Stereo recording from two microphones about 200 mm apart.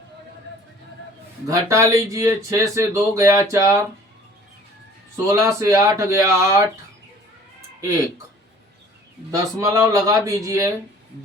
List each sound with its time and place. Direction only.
1.5 s speech: 15° right (ahead or behind)
5.1 s speech: 15° right (ahead or behind)
7.8 s speech: 15° right (ahead or behind)
9.3 s speech: 15° right (ahead or behind)